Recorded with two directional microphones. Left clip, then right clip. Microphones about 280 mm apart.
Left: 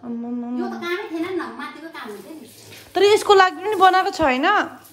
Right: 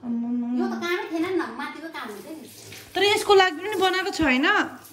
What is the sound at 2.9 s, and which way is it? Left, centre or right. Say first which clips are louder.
A woman's voice: left 4 dB; left.